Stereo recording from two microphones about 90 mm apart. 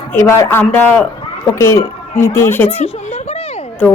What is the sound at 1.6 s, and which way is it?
Speech, 35° left (ahead or behind).